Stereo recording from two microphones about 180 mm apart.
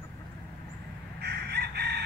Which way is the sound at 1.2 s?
65° right (ahead or behind).